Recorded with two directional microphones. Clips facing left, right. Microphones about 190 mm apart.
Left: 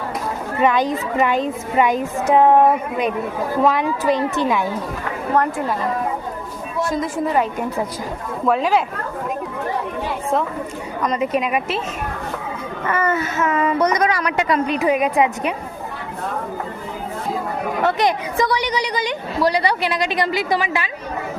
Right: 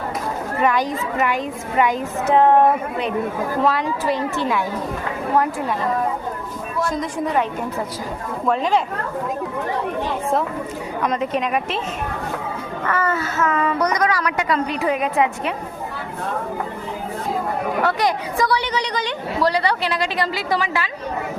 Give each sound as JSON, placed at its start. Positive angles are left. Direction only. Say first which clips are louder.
{"t": 0.6, "sound": "speech", "louder": "left 3 dB", "side_deg": 20}
{"t": 3.7, "sound": "a woman's voice", "louder": "left 3 dB", "side_deg": 15}
{"t": 6.9, "sound": "a woman's voice", "louder": "left 3 dB", "side_deg": 0}
{"t": 8.4, "sound": "a woman's voice", "louder": "left 2 dB", "side_deg": 5}
{"t": 11.0, "sound": "a woman's voice", "louder": "left 2 dB", "side_deg": 0}
{"t": 12.8, "sound": "speech", "louder": "left 2 dB", "side_deg": 20}
{"t": 17.8, "sound": "a woman's voice", "louder": "left 5 dB", "side_deg": 20}